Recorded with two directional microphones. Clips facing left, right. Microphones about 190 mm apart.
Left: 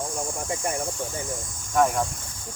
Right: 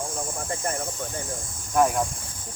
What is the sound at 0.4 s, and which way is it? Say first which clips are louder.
Speech: left 1 dB; 15° left (ahead or behind).